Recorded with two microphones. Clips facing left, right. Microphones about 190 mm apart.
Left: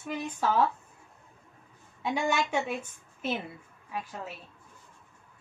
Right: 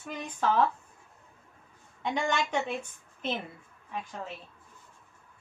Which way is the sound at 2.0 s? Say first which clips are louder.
Left 1 dB; 10° left (ahead or behind).